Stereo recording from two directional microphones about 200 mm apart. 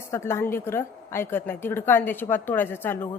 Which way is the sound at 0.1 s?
15° left (ahead or behind).